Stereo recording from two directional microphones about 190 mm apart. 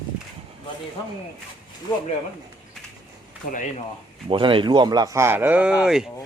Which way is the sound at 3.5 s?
40° left (ahead or behind).